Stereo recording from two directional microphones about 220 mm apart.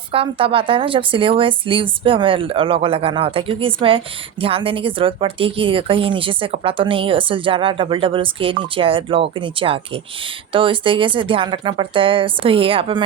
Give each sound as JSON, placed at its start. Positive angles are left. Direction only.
{"t": 0.1, "sound": "a woman's voice", "side_deg": -25}